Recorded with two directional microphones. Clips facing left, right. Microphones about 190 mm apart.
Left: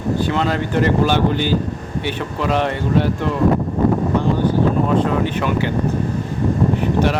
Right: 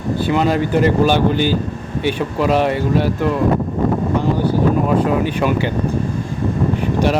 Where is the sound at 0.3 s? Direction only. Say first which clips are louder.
Right 4 dB; 15° right (ahead or behind).